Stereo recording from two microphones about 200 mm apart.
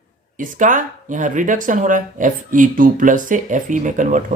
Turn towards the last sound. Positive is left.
turn(degrees=-40)  # may be behind; listen again after turning